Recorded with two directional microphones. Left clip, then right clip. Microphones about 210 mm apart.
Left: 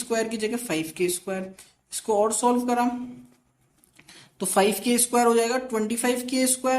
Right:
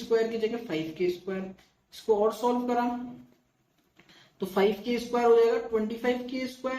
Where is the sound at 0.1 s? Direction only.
50° left (ahead or behind).